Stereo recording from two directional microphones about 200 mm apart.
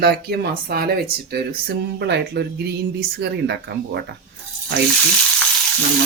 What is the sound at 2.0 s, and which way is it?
Speech, 55° right (ahead or behind).